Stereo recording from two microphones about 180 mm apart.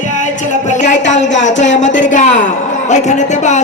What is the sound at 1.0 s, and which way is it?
Speech, 40° left (ahead or behind).